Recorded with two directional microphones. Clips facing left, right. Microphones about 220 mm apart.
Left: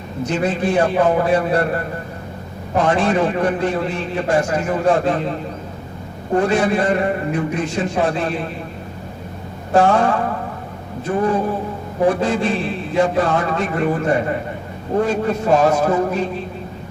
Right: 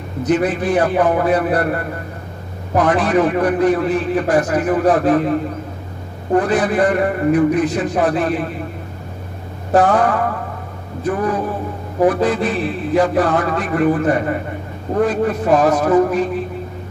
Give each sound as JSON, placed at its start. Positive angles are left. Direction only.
{"t": 0.2, "sound": "a man's voice", "side_deg": 25}
{"t": 2.7, "sound": "a man's voice", "side_deg": 25}
{"t": 6.3, "sound": "a man's voice", "side_deg": 25}
{"t": 9.7, "sound": "a man's voice", "side_deg": 25}